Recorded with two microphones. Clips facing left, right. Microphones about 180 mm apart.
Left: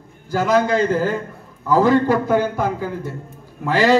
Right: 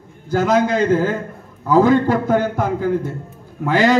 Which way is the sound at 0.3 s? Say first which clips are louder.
Right 1 dB; 55° right (ahead or behind).